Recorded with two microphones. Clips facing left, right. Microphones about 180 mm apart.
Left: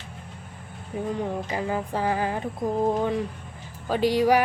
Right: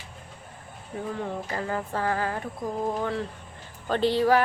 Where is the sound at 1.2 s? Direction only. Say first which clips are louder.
Left 3 dB; 15° left (ahead or behind).